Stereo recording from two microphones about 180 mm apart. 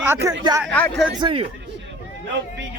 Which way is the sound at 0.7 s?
10° left (ahead or behind).